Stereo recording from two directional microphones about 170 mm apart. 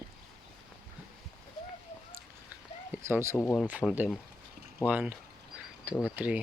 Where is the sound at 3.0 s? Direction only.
15° right (ahead or behind).